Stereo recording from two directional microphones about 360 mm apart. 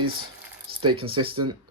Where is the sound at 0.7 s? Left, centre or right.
Right.